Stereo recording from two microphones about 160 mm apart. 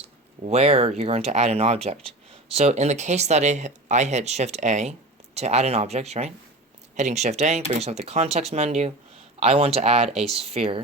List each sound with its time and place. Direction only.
0.4 s speech: 40° right (ahead or behind)